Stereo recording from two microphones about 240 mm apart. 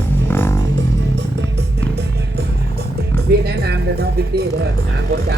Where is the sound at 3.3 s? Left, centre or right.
Right.